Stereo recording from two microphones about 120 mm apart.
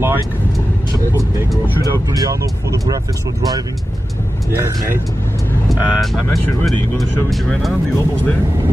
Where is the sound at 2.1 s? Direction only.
30° right (ahead or behind).